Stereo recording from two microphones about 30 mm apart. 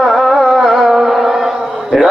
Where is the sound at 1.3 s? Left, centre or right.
Centre.